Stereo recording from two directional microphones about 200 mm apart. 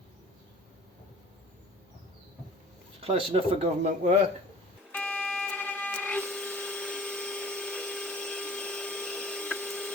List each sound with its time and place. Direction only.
3.0 s speech: 30° right (ahead or behind)
4.9 s printer: 5° left (ahead or behind)